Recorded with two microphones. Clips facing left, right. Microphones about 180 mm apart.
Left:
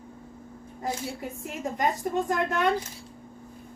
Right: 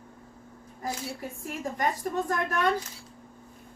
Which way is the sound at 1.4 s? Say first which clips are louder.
Left 2 dB; 20° left (ahead or behind).